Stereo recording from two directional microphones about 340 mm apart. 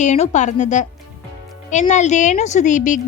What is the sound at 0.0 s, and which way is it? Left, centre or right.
A woman's voice, left.